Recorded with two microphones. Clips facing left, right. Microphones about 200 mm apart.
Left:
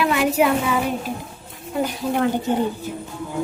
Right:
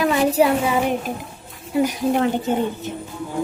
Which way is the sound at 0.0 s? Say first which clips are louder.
Right 2 dB; 35° right (ahead or behind).